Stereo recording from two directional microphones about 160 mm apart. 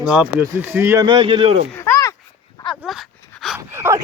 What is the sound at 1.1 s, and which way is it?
Speech, 35° right (ahead or behind).